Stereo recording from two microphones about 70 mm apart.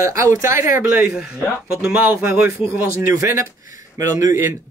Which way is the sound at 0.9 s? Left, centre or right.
Centre.